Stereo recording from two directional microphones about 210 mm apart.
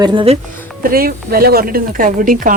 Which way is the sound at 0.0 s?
25° right (ahead or behind).